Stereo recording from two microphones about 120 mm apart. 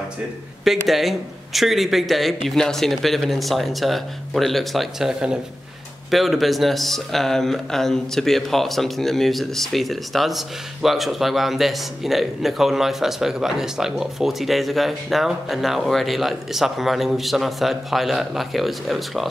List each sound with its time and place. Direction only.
0.7 s speech: centre (ahead or behind)